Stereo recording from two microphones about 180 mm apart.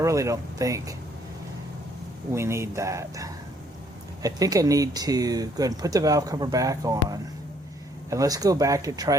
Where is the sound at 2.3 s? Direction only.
15° right (ahead or behind).